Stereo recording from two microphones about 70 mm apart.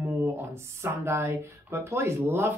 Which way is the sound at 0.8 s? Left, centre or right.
Right.